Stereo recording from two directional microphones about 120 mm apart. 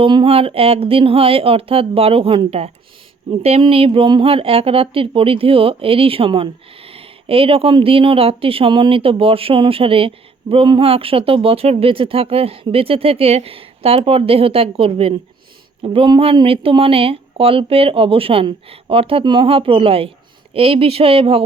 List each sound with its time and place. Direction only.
0.0 s speech: 45° right (ahead or behind)